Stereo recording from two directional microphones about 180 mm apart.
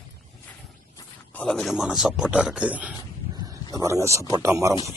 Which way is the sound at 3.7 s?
15° right (ahead or behind).